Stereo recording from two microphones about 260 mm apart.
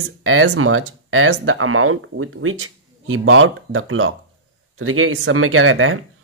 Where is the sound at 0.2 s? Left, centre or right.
Right.